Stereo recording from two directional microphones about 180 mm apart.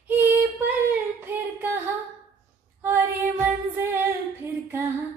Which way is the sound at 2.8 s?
10° right (ahead or behind).